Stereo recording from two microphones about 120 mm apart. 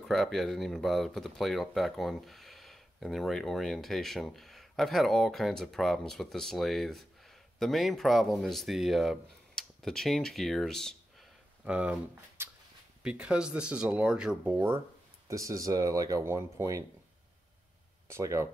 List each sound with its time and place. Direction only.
0.0 s speech: 5° left (ahead or behind)
11.6 s speech: 10° right (ahead or behind)
15.2 s speech: 25° right (ahead or behind)
18.0 s speech: 25° right (ahead or behind)